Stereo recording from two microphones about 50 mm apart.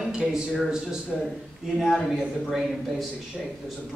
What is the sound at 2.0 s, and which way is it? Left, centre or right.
Speech, centre.